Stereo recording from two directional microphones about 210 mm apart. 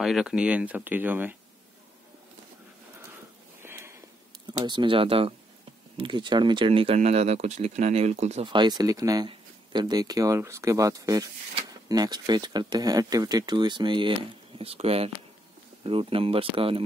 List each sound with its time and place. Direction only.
0.0 s speech: centre (ahead or behind)
3.6 s a sound: 10° right (ahead or behind)
4.5 s speech: 20° right (ahead or behind)